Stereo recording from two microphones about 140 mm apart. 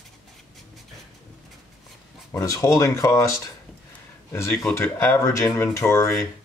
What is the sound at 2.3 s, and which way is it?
Speech, 20° left (ahead or behind).